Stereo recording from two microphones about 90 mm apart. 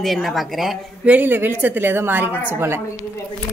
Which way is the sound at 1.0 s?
20° right (ahead or behind).